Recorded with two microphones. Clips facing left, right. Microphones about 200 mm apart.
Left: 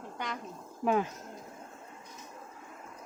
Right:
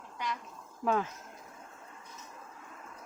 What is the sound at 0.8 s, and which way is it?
Speech, 15° left (ahead or behind).